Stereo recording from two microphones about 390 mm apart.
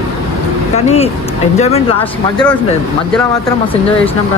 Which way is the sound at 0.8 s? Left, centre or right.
Centre.